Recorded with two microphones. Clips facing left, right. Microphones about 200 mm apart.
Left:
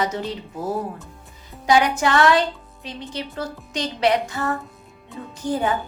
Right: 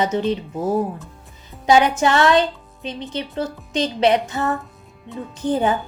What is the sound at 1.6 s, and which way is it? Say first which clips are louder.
A woman's voice: right 3 dB; 25° right (ahead or behind).